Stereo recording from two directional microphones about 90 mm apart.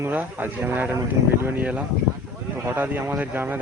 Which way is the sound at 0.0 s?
20° right (ahead or behind).